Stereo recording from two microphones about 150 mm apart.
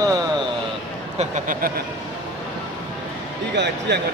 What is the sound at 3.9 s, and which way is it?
Speech, 90° right.